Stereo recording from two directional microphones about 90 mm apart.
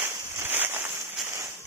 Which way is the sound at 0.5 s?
20° right (ahead or behind).